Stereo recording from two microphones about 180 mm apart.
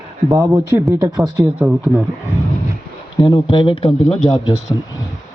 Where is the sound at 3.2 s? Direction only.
20° left (ahead or behind).